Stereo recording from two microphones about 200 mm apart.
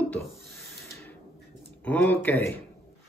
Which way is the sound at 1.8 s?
5° left (ahead or behind).